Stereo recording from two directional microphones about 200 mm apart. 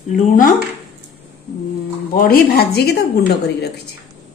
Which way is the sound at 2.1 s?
50° left (ahead or behind).